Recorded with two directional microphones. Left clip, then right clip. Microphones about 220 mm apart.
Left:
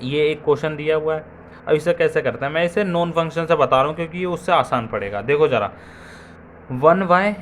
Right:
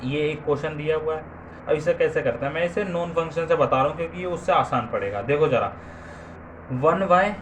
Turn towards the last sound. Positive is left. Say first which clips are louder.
# left 4 dB
turn(degrees=35)  # may be behind; listen again after turning